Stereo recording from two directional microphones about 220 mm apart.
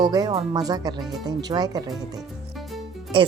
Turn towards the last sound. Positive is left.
turn(degrees=-20)  # may be behind; listen again after turning